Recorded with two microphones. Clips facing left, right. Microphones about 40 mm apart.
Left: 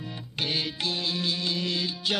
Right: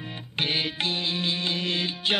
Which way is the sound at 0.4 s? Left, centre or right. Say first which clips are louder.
Right 3 dB; right.